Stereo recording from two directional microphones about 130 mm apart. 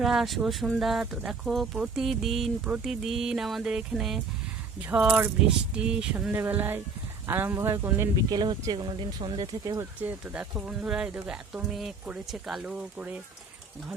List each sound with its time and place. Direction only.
0.0 s speech: centre (ahead or behind)
4.9 s speech: 15° right (ahead or behind)
8.3 s speech: 30° right (ahead or behind)
10.0 s speech: 10° right (ahead or behind)